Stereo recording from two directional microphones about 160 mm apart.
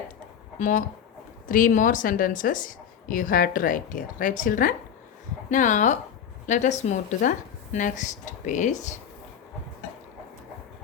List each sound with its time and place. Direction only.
0.6 s a woman's voice: 55° left (ahead or behind)